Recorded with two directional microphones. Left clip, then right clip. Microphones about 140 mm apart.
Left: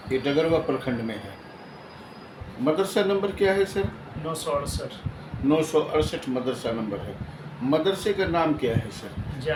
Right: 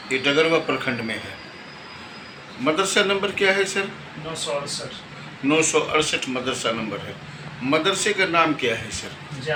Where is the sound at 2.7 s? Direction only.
30° left (ahead or behind).